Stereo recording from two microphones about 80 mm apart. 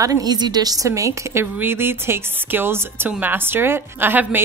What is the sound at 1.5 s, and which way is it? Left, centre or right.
A woman's voice, right.